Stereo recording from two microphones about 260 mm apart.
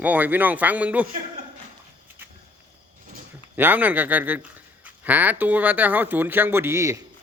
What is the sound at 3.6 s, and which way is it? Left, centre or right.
A man's voice, centre.